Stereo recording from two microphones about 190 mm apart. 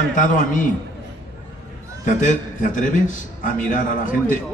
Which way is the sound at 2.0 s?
40° left (ahead or behind).